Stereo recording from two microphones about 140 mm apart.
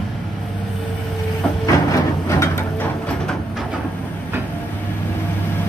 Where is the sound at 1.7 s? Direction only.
20° left (ahead or behind).